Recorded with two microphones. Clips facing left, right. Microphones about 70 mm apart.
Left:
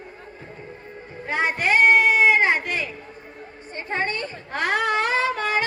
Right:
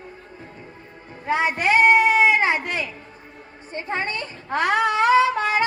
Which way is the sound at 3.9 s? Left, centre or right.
Left.